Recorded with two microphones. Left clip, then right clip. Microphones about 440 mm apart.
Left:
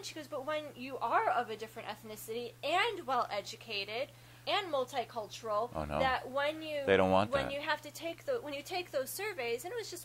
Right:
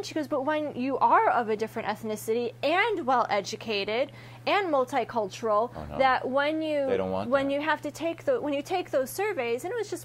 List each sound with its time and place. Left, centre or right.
0.1 s a woman's voice: right
6.9 s speech: left
7.3 s a woman's voice: right